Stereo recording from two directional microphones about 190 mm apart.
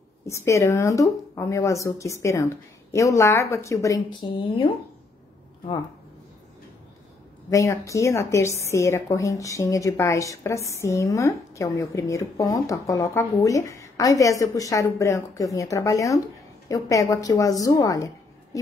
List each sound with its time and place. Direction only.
0.3 s a woman's voice: 15° left (ahead or behind)
7.4 s a woman's voice: 15° left (ahead or behind)